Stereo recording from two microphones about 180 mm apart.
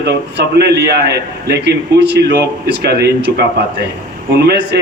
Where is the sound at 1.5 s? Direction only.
70° right (ahead or behind).